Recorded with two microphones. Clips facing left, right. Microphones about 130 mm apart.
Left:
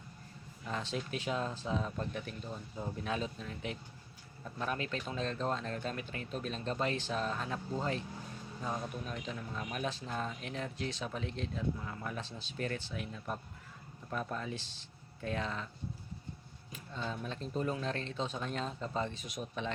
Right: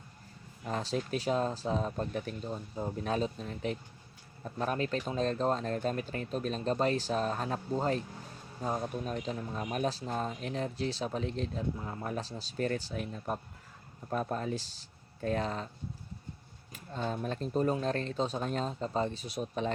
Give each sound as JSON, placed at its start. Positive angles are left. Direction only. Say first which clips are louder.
{"t": 0.6, "sound": "speech", "louder": "right 5 dB", "side_deg": -35}
{"t": 16.9, "sound": "speech", "louder": "right 5 dB", "side_deg": -45}